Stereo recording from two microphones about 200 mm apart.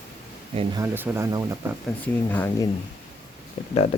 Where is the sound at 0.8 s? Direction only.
10° right (ahead or behind).